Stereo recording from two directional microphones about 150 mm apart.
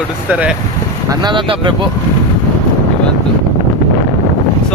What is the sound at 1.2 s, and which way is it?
Speech, 30° right (ahead or behind).